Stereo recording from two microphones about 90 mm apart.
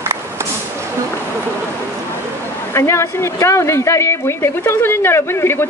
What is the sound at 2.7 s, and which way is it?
Speech, 30° left (ahead or behind).